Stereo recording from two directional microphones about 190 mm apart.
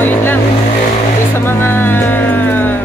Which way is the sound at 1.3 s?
10° left (ahead or behind).